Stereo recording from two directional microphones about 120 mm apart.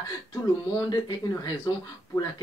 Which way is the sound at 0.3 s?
30° left (ahead or behind).